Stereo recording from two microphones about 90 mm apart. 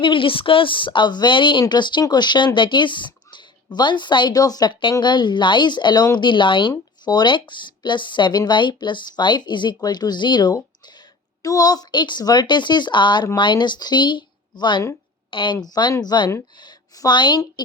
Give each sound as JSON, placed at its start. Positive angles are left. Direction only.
{"t": 0.0, "sound": "speech", "side_deg": 70}
{"t": 4.4, "sound": "speech", "side_deg": 45}
{"t": 11.4, "sound": "speech", "side_deg": 45}
{"t": 15.3, "sound": "a woman's voice", "side_deg": 65}
{"t": 15.6, "sound": "a woman's voice", "side_deg": 45}